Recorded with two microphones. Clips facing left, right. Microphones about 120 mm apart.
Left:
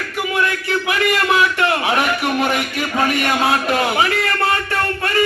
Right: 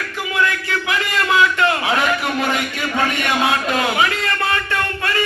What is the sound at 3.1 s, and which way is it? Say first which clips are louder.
Speech: left 2 dB; 30° left (ahead or behind).